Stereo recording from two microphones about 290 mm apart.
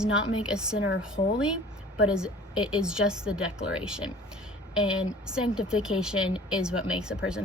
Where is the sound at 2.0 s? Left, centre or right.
Centre.